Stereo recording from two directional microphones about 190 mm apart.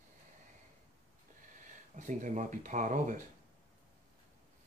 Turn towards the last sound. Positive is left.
turn(degrees=-40)  # may be behind; listen again after turning